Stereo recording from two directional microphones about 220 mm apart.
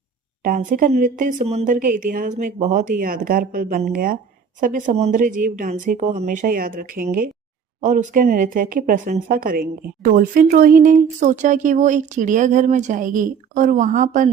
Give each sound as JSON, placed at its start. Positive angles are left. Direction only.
{"t": 0.4, "sound": "speech", "side_deg": -40}